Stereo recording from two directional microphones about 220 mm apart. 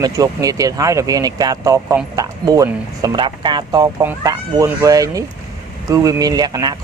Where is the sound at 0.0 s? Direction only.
15° right (ahead or behind).